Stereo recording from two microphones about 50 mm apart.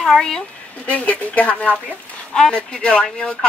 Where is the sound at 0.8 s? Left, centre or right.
Left.